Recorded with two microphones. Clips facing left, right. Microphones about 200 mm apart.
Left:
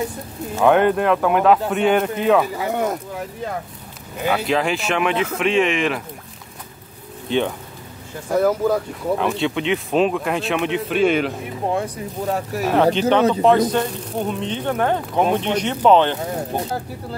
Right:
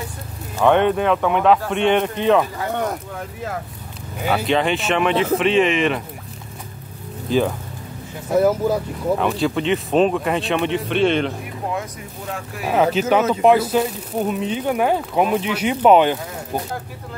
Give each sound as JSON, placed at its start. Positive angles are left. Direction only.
{"t": 0.6, "sound": "speech", "side_deg": 0}
{"t": 7.2, "sound": "speech", "side_deg": 0}
{"t": 11.7, "sound": "speech", "side_deg": 35}
{"t": 12.6, "sound": "speech", "side_deg": -5}